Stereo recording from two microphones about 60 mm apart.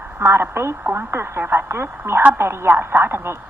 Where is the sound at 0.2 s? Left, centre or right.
Right.